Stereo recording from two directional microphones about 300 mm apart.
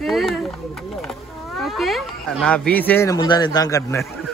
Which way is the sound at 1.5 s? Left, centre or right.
Centre.